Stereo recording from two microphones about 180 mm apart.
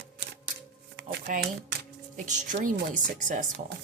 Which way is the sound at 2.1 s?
45° right (ahead or behind).